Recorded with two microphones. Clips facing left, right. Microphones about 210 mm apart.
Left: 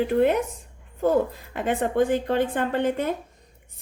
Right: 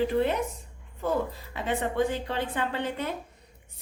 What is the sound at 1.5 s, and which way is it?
A woman's voice, 50° left (ahead or behind).